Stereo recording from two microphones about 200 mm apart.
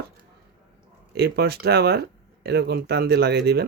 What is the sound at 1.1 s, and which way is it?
Speech, 55° right (ahead or behind).